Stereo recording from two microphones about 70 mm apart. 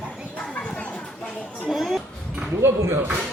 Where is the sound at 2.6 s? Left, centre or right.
Right.